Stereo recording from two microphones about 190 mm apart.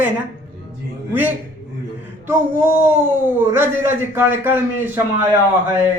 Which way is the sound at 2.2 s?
15° right (ahead or behind).